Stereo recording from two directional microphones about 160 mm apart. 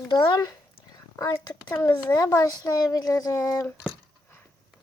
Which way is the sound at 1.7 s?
15° left (ahead or behind).